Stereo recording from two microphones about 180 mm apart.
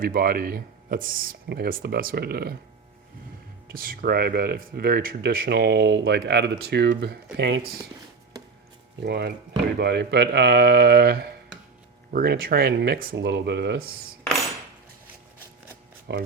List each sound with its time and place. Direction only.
0.0 s speech: 55° right (ahead or behind)
3.7 s speech: 55° right (ahead or behind)
9.0 s speech: 65° right (ahead or behind)
16.1 s speech: 75° right (ahead or behind)